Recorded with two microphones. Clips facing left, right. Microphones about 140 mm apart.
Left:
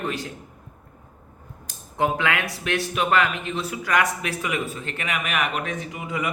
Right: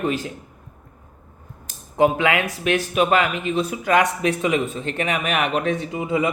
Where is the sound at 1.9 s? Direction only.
15° right (ahead or behind).